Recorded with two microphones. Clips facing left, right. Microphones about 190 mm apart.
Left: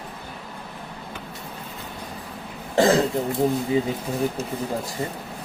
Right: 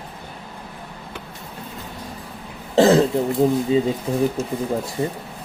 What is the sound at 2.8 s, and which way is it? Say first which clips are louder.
Cough: right 4 dB; 25° right (ahead or behind).